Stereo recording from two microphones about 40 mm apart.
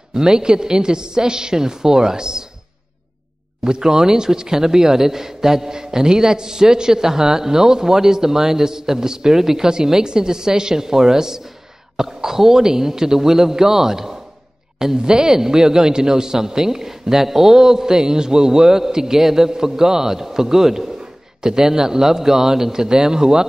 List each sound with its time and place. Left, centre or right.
0.1 s a woman's voice: centre
3.6 s a man's voice: centre